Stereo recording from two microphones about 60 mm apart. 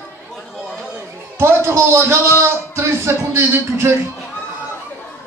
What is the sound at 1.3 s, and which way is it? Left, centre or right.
A man's voice, right.